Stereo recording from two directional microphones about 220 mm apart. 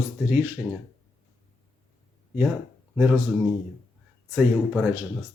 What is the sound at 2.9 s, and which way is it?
Speech, 5° right (ahead or behind).